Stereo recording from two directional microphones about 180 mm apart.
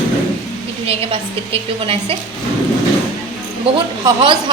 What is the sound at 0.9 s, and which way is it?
A woman's voice, 30° right (ahead or behind).